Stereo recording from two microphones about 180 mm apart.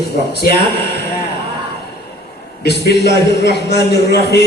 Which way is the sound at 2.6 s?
70° left (ahead or behind).